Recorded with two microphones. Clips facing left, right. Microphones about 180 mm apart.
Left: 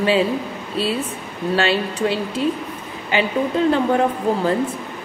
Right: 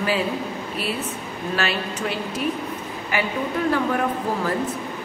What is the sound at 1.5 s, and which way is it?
Speech, 30° left (ahead or behind).